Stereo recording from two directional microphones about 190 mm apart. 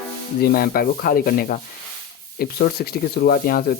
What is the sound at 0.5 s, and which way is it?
Speech, 50° left (ahead or behind).